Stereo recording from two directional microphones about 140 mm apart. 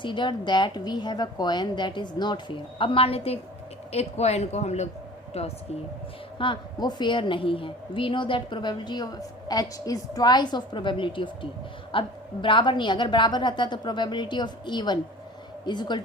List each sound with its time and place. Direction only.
0.0 s a woman's voice: 35° left (ahead or behind)
6.4 s a woman's voice: 35° left (ahead or behind)